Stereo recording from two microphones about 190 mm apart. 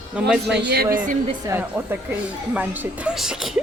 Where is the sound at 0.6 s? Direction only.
60° right (ahead or behind).